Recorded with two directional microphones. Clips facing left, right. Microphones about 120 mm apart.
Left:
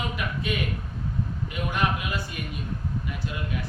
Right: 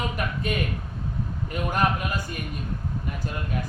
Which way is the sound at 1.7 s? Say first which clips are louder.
Right 3 dB; 45° right (ahead or behind).